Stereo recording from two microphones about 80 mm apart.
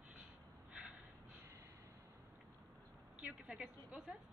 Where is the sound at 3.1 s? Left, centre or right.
Centre.